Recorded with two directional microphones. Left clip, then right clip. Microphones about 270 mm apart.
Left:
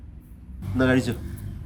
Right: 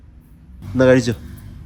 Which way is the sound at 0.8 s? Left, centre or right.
Right.